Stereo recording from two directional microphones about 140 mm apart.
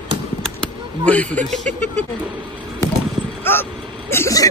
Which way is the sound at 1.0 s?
10° left (ahead or behind).